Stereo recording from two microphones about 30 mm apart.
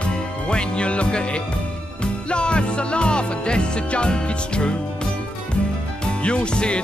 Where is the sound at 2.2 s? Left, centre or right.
Left.